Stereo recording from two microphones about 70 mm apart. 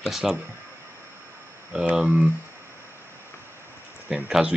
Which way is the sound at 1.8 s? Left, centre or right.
Right.